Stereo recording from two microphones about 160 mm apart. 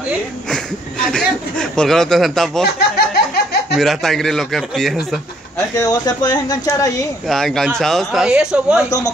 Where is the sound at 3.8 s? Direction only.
Centre (ahead or behind).